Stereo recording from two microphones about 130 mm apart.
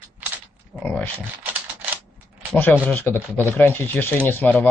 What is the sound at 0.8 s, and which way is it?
Speech, 15° left (ahead or behind).